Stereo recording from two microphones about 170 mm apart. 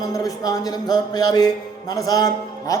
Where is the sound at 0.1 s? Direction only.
20° left (ahead or behind).